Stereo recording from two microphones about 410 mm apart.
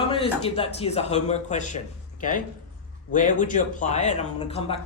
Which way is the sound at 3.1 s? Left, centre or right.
Centre.